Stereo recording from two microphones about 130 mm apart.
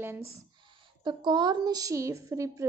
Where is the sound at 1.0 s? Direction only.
35° right (ahead or behind).